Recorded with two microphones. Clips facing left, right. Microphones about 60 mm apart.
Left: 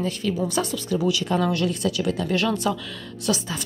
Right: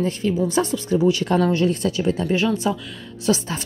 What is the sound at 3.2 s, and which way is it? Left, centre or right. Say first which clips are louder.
Speech: right 4 dB; right.